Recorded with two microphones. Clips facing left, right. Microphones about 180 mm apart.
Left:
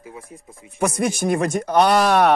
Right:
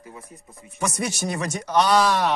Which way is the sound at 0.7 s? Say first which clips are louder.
Left 6 dB; 55° left (ahead or behind).